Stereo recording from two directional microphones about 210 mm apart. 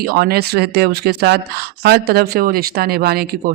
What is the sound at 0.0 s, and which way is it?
Speech, 45° right (ahead or behind).